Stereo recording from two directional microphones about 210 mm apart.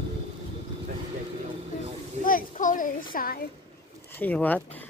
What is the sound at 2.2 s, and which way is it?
A child's voice, 40° left (ahead or behind).